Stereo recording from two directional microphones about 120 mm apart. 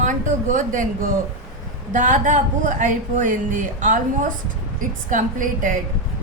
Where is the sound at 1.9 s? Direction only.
90° right.